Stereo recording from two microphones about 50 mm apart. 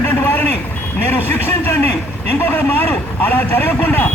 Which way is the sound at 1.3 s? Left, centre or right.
Left.